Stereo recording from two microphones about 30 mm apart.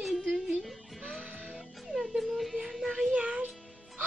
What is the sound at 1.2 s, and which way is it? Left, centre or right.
Music, right.